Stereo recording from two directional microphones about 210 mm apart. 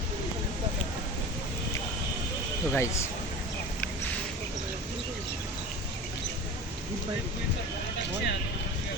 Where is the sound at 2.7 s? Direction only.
10° left (ahead or behind).